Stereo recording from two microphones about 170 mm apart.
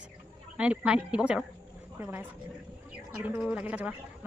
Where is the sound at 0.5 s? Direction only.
5° right (ahead or behind).